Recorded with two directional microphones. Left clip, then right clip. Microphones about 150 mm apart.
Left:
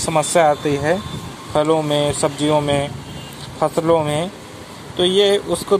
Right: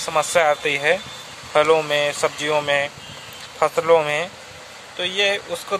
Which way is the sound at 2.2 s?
20° right (ahead or behind).